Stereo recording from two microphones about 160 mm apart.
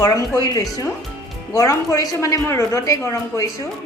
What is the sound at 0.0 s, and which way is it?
A woman's voice, 20° left (ahead or behind).